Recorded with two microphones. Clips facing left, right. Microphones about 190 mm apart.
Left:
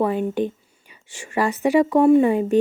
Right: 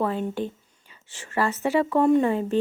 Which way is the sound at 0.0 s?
15° left (ahead or behind).